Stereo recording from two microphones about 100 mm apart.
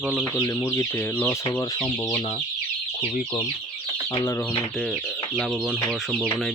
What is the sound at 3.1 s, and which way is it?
Speech, 90° left.